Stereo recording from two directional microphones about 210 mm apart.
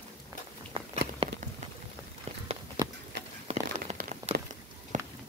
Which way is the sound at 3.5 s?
35° right (ahead or behind).